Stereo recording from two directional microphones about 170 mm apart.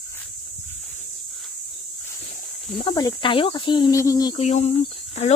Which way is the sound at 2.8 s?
25° left (ahead or behind).